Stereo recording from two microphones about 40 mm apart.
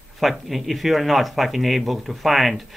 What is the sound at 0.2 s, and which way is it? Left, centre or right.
Speech, centre.